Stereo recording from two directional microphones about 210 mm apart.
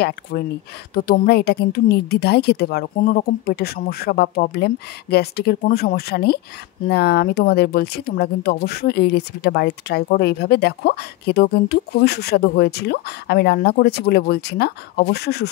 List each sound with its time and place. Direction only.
0.3 s speech: 45° left (ahead or behind)